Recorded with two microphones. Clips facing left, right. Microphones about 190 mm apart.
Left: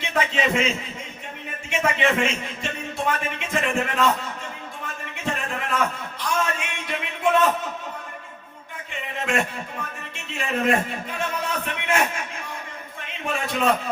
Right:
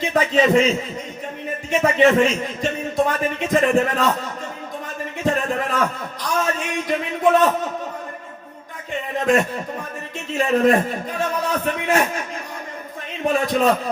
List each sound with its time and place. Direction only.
0.0 s a man's voice: 40° right (ahead or behind)
1.7 s a man's voice: 35° right (ahead or behind)
5.2 s a man's voice: 35° right (ahead or behind)
8.9 s a man's voice: 35° right (ahead or behind)
13.2 s a man's voice: 35° right (ahead or behind)